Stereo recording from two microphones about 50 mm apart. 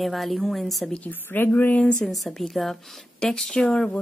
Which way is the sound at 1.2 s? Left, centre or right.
Left.